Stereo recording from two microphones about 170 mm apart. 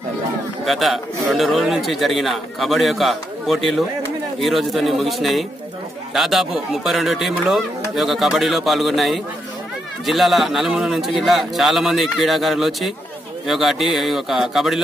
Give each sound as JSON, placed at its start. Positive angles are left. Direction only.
{"t": 0.7, "sound": "a man's voice", "side_deg": 0}